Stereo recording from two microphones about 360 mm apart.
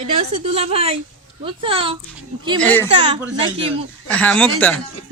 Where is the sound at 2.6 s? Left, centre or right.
Centre.